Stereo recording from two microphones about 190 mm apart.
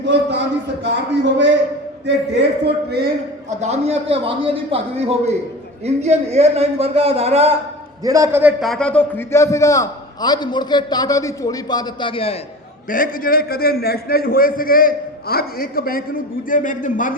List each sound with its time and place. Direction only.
0.0 s a man's voice: 65° right (ahead or behind)
2.0 s a man's voice: 65° right (ahead or behind)
3.5 s a man's voice: 35° right (ahead or behind)
8.0 s a man's voice: 15° right (ahead or behind); by 12.4 s 30° left (ahead or behind)
12.9 s a man's voice: 50° left (ahead or behind)